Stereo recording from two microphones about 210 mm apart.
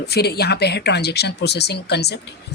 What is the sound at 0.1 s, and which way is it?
Speech, 50° left (ahead or behind).